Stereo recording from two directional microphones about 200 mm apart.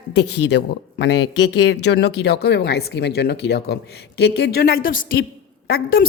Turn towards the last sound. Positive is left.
turn(degrees=50)  # may be behind; listen again after turning